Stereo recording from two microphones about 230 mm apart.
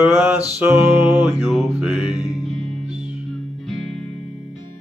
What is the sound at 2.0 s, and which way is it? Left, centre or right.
Music, centre.